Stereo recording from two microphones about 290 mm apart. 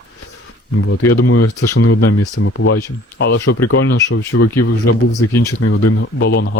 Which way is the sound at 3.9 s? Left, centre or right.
Left.